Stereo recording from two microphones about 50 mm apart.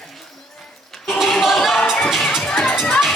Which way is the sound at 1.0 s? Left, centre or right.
Centre.